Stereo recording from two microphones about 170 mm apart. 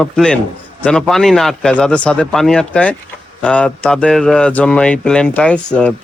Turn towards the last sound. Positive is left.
turn(degrees=5)  # may be behind; listen again after turning